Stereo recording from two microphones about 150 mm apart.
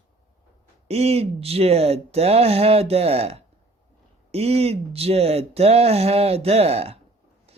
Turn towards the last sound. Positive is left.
turn(degrees=-45)  # may be behind; listen again after turning